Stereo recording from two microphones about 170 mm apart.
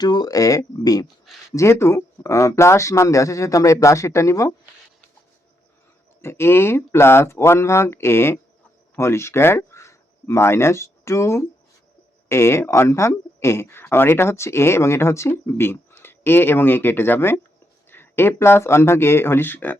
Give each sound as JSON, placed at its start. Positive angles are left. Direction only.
{"t": 0.0, "sound": "speech", "side_deg": 25}
{"t": 6.2, "sound": "speech", "side_deg": 15}